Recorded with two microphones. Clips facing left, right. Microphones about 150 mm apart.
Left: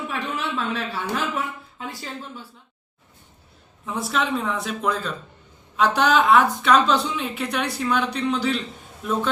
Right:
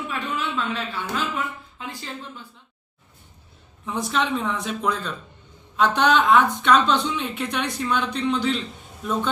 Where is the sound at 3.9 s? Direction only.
5° left (ahead or behind).